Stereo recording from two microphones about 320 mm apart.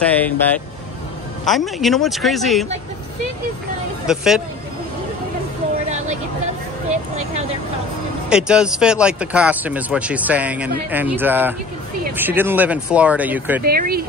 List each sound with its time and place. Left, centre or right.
0.0 s speech: centre
1.4 s speech: centre
4.1 s speech: centre
8.3 s speech: centre
13.7 s speech: right